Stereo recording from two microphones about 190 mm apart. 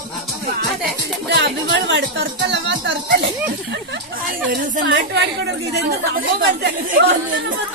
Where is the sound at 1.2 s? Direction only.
65° right (ahead or behind).